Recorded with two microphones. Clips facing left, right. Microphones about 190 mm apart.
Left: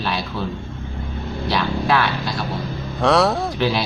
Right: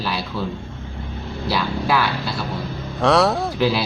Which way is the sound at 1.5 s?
5° right (ahead or behind).